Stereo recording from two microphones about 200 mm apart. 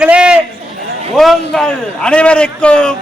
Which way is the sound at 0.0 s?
5° right (ahead or behind).